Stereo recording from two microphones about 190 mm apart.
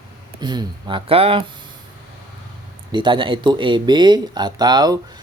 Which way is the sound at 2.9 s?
25° right (ahead or behind).